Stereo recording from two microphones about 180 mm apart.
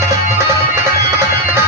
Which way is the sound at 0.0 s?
15° right (ahead or behind).